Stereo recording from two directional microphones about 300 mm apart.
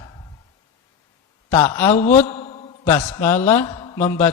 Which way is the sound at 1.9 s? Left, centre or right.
Left.